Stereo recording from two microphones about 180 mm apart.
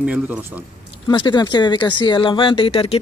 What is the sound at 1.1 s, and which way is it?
Speech, 25° left (ahead or behind).